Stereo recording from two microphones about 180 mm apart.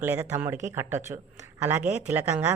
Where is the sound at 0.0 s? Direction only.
10° right (ahead or behind).